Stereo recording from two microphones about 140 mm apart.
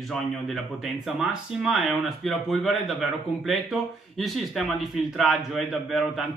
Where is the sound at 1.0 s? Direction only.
Centre (ahead or behind).